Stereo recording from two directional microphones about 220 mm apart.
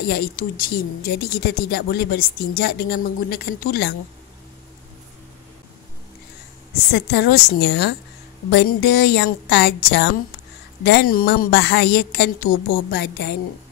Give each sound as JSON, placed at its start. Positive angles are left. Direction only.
{"t": 0.1, "sound": "speech", "side_deg": 40}
{"t": 6.9, "sound": "speech", "side_deg": 50}